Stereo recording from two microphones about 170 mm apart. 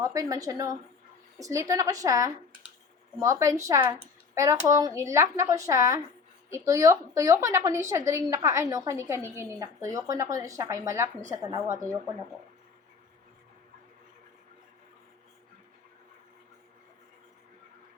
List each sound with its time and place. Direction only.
0.0 s speech: 20° right (ahead or behind)